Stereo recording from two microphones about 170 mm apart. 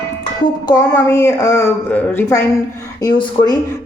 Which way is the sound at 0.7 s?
20° left (ahead or behind).